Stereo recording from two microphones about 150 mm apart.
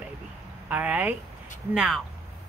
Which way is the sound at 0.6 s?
10° right (ahead or behind).